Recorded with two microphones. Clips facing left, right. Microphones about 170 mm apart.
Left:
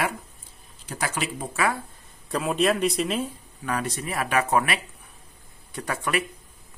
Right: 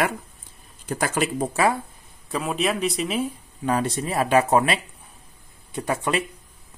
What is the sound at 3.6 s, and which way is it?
Speech, 30° right (ahead or behind).